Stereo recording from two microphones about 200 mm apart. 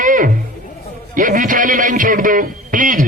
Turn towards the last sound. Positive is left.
turn(degrees=-45)  # may be behind; listen again after turning